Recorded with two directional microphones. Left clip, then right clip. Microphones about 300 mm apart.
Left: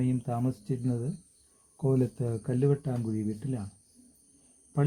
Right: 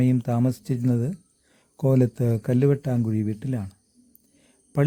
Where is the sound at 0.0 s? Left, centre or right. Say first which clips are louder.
Right 7 dB; right.